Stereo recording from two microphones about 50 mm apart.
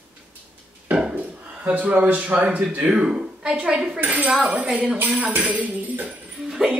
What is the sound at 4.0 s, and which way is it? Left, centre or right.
Speech, right.